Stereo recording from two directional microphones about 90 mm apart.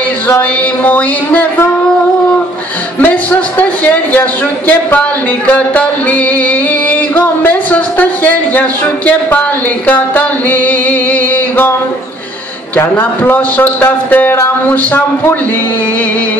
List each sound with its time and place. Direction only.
0.3 s a sound: 20° left (ahead or behind)
3.0 s a man's voice: 15° left (ahead or behind)
5.5 s music: 15° left (ahead or behind)
12.7 s a man's voice: 20° left (ahead or behind)